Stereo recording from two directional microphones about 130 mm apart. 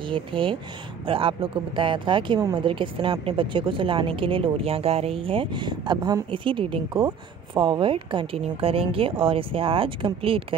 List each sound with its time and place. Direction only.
0.0 s a woman's voice: 40° right (ahead or behind)